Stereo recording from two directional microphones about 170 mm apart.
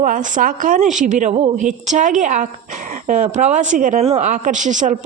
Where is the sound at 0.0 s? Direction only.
50° right (ahead or behind).